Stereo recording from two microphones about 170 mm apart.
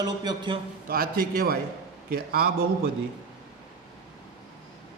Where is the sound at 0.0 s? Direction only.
25° right (ahead or behind).